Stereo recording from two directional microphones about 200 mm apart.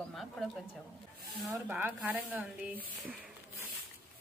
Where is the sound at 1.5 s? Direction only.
10° right (ahead or behind).